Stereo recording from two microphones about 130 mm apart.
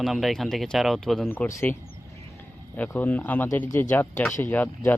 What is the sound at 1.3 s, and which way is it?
Speech, 20° left (ahead or behind).